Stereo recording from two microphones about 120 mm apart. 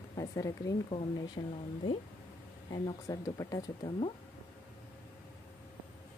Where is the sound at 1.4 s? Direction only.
45° left (ahead or behind).